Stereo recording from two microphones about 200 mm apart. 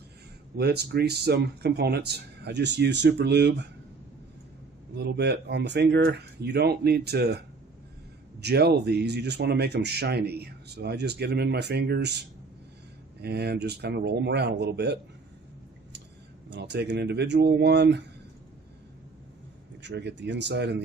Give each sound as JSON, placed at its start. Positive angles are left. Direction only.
{"t": 0.5, "sound": "speech", "side_deg": -55}
{"t": 4.9, "sound": "speech", "side_deg": -55}
{"t": 8.4, "sound": "speech", "side_deg": -55}
{"t": 13.2, "sound": "speech", "side_deg": -55}
{"t": 16.5, "sound": "speech", "side_deg": -60}
{"t": 19.8, "sound": "speech", "side_deg": -60}